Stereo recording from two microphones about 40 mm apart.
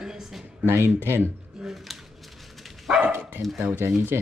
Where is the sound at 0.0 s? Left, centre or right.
Centre.